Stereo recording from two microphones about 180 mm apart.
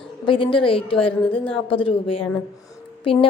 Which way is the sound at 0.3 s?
30° left (ahead or behind).